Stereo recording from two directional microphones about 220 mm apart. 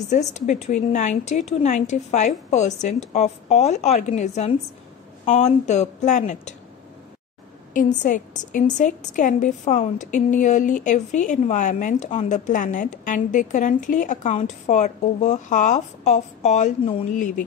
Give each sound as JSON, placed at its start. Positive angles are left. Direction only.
{"t": 0.1, "sound": "a woman's voice", "side_deg": 35}
{"t": 7.7, "sound": "a woman's voice", "side_deg": 35}